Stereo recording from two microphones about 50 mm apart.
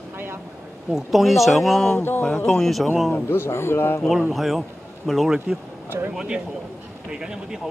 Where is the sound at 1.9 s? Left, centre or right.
Left.